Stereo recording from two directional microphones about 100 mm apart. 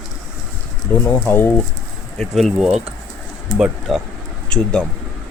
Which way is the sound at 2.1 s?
Centre (ahead or behind).